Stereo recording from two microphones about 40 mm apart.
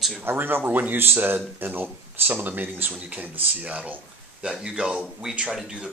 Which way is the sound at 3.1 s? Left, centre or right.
Right.